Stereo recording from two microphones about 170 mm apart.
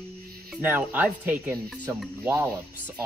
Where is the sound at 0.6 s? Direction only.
10° right (ahead or behind).